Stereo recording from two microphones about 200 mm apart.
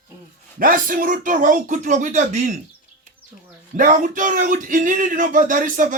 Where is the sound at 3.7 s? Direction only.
40° right (ahead or behind).